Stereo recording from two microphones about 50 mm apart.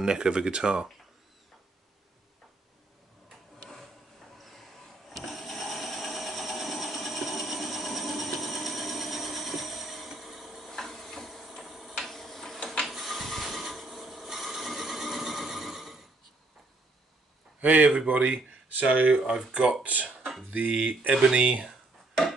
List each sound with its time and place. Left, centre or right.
0.0 s speech: centre
4.4 s a sound: centre
10.7 s tick-tock: centre
12.8 s mechanisms: centre
17.6 s speech: right
18.8 s speech: right
19.5 s speech: right
20.5 s speech: right